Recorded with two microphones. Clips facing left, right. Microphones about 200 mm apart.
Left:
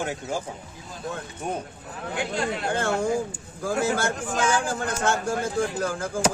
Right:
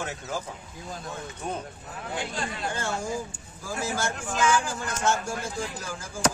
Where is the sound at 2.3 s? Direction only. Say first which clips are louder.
Left 6 dB; 60° left (ahead or behind).